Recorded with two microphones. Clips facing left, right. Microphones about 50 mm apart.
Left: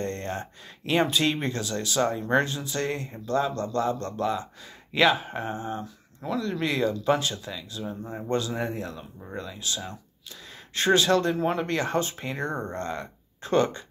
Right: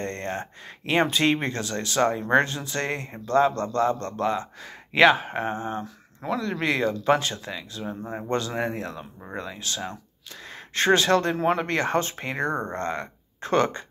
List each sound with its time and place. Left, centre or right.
0.0 s speech: right